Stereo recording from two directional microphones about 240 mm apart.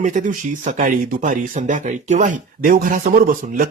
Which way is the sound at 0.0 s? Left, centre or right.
Right.